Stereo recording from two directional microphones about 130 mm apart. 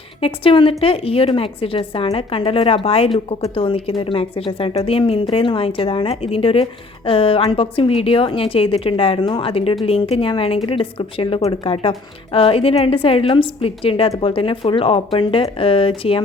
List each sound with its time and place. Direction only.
0.2 s speech: 45° left (ahead or behind)